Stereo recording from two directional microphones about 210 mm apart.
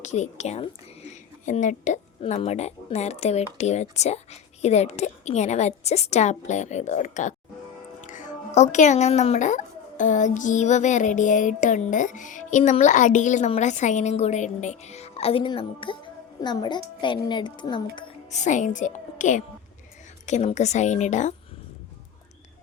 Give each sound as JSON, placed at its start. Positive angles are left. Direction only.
{"t": 0.0, "sound": "a woman's voice", "side_deg": 35}